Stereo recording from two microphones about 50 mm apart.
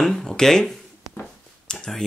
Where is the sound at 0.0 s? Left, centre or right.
Centre.